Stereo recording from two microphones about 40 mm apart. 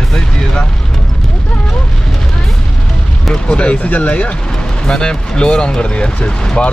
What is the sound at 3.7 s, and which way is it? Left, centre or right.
Speech, left.